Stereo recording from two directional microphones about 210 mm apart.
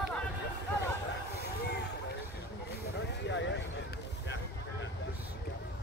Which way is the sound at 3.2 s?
60° left (ahead or behind).